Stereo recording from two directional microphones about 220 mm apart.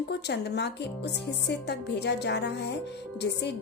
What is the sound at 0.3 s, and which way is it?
A woman's voice, 50° left (ahead or behind).